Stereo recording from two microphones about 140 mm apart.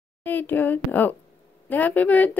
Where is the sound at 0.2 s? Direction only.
15° left (ahead or behind).